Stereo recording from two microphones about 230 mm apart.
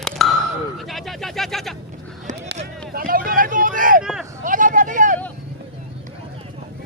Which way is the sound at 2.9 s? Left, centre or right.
Right.